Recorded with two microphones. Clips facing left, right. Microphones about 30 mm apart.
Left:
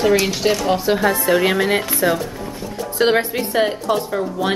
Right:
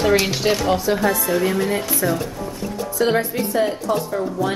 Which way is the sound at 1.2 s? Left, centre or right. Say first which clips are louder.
Left 4 dB; left.